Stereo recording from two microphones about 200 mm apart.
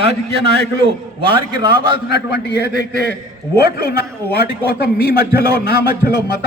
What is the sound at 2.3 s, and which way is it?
A man's voice, 55° left (ahead or behind).